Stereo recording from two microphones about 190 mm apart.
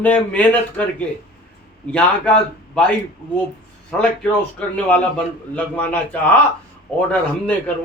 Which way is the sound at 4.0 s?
5° left (ahead or behind).